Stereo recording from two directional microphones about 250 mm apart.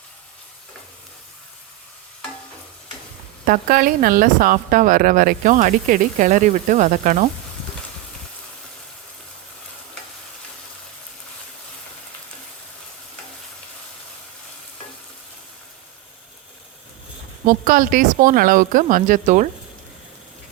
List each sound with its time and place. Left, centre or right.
3.4 s speech: right
17.4 s speech: right